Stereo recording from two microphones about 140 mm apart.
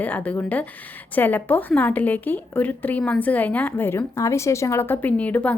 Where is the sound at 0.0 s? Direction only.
10° left (ahead or behind).